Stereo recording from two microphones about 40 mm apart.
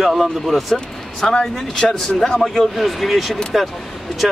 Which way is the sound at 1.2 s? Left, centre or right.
Centre.